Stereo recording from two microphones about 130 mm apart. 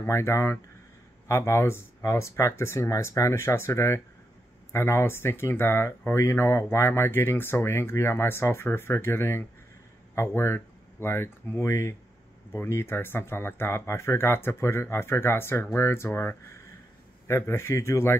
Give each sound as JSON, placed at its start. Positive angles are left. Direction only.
{"t": 0.0, "sound": "speech", "side_deg": 20}